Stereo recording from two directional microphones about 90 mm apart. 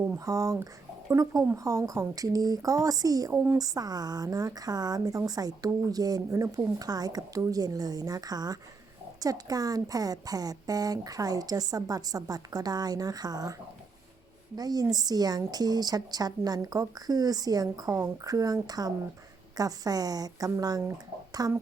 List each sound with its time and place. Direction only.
0.2 s a woman's voice: 40° right (ahead or behind)
3.3 s speech: 25° right (ahead or behind)
3.6 s a woman's voice: 45° right (ahead or behind)